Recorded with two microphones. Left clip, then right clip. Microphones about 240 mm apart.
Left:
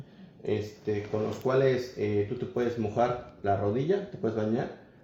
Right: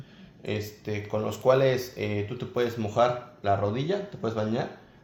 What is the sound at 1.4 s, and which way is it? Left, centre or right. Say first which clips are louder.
Speech: right 4 dB; right.